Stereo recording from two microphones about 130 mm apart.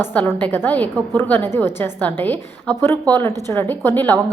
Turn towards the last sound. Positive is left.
turn(degrees=15)  # may be behind; listen again after turning